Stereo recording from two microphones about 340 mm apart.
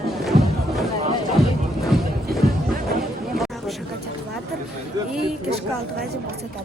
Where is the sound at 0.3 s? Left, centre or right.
Centre.